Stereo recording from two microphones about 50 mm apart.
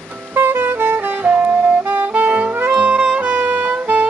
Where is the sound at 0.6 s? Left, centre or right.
Right.